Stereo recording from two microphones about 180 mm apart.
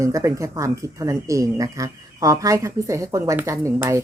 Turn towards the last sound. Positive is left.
turn(degrees=-15)  # may be behind; listen again after turning